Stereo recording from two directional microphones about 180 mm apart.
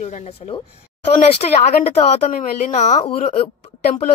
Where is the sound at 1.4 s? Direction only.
45° left (ahead or behind).